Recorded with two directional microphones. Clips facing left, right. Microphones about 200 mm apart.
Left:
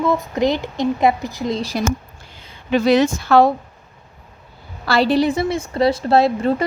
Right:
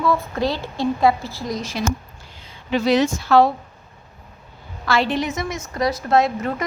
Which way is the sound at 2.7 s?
55° left (ahead or behind).